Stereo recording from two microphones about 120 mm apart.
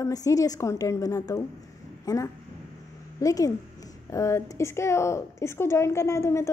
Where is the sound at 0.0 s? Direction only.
30° left (ahead or behind).